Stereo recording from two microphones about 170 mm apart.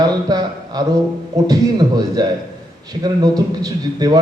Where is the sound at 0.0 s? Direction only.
25° right (ahead or behind).